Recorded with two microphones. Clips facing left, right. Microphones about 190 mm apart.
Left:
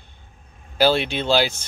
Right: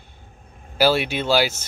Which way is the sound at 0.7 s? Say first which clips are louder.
Even; 5° right (ahead or behind).